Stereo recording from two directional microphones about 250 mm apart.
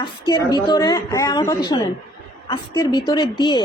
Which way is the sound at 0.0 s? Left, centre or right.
Centre.